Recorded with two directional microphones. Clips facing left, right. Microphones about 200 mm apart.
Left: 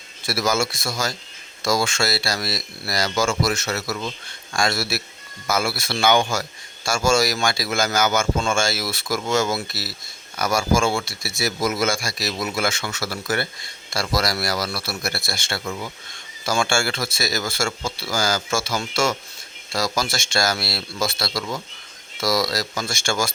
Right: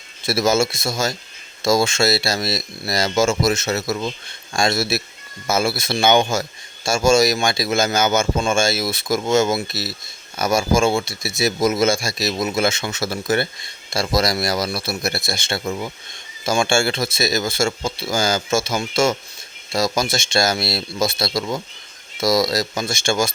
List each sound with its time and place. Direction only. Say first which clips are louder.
0.2 s speech: right 5 dB; 25° right (ahead or behind)